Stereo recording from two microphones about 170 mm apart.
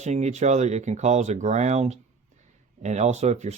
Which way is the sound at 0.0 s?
45° right (ahead or behind).